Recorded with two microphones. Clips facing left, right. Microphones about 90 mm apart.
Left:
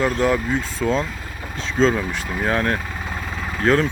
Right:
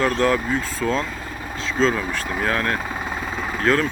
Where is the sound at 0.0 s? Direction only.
15° left (ahead or behind).